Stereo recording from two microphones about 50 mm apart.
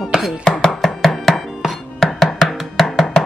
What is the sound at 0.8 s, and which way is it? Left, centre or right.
Chopping, centre.